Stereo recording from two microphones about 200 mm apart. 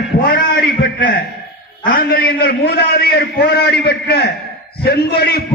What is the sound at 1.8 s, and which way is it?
A man's voice, 45° left (ahead or behind).